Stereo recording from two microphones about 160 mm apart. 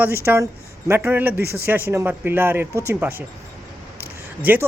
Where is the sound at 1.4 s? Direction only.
80° right.